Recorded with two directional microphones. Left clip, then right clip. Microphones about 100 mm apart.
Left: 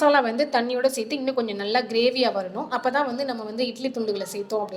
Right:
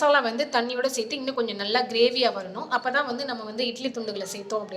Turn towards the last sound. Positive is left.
turn(degrees=20)  # may be behind; listen again after turning